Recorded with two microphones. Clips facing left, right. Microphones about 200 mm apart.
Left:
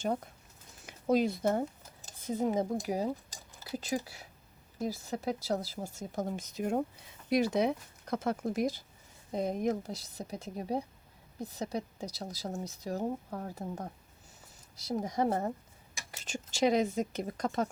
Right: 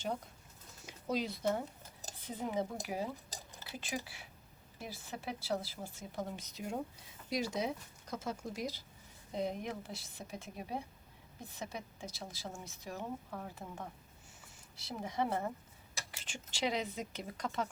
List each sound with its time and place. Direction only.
0.9 s speech: 50° left (ahead or behind)